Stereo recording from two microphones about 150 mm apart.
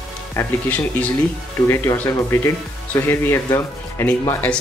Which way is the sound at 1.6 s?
15° left (ahead or behind).